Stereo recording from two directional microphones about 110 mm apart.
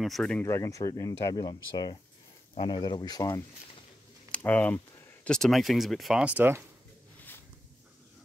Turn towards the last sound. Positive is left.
turn(degrees=15)  # may be behind; listen again after turning